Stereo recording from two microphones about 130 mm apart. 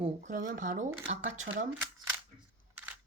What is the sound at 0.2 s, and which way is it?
Speech, 90° right.